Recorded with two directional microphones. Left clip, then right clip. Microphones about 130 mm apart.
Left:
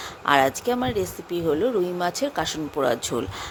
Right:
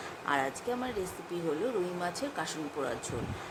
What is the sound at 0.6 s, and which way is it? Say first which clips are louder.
Speech: left 10 dB; 90° left.